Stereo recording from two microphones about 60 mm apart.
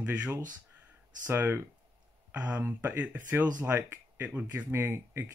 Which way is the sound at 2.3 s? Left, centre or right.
Right.